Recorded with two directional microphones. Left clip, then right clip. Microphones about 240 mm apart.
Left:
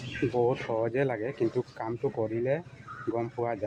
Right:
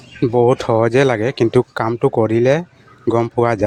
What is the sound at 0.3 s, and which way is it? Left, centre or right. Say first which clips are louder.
Speech: right 15 dB; right.